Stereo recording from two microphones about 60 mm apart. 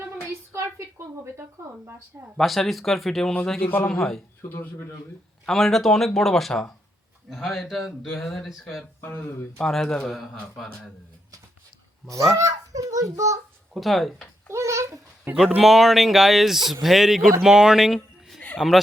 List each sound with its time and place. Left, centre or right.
0.5 s a sound: right
2.4 s speech: centre
3.6 s speech: left
3.8 s speech: centre
4.4 s speech: left
5.5 s a man's voice: centre
8.8 s speech: left
9.6 s a man's voice: centre
12.4 s a child's voice: right
13.7 s speech: centre
14.5 s a child's voice: right
15.4 s speech: centre